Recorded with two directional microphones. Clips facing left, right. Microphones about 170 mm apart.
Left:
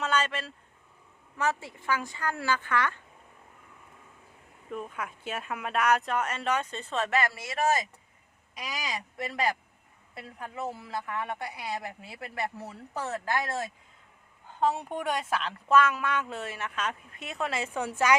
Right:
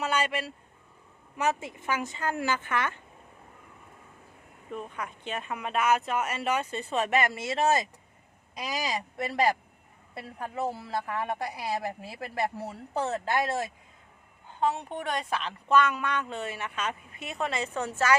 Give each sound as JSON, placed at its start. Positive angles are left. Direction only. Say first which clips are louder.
{"t": 0.0, "sound": "vehicle", "louder": "right 1 dB", "side_deg": -10}
{"t": 1.4, "sound": "a woman's voice", "louder": "right 2 dB", "side_deg": -20}
{"t": 4.7, "sound": "a woman's voice", "louder": "even", "side_deg": 5}
{"t": 14.7, "sound": "speech", "louder": "left 1 dB", "side_deg": 10}